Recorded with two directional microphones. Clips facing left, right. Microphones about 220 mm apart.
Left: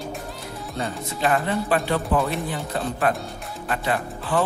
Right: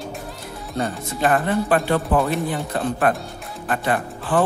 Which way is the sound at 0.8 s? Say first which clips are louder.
Right 4 dB; 50° right (ahead or behind).